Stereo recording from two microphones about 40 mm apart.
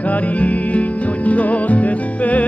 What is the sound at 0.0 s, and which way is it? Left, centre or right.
Music, left.